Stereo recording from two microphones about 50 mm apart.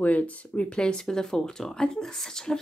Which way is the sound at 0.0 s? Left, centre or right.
Left.